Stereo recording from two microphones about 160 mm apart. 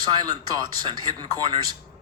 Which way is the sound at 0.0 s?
25° right (ahead or behind).